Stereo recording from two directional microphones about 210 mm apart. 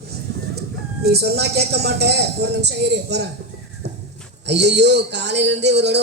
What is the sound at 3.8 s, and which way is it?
Horse, 50° right (ahead or behind).